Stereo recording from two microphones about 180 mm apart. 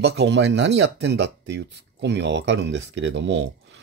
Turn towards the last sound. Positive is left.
turn(degrees=-80)